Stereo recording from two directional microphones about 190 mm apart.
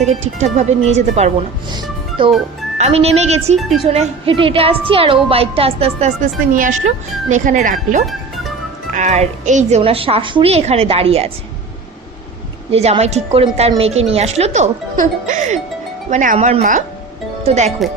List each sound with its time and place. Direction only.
0.1 s a woman's voice: 35° right (ahead or behind)
1.7 s music: 25° right (ahead or behind)
2.7 s a woman's voice: 35° right (ahead or behind)
3.6 s speech: centre (ahead or behind)
3.8 s a woman's voice: 30° right (ahead or behind)
12.7 s a woman's voice: 35° right (ahead or behind)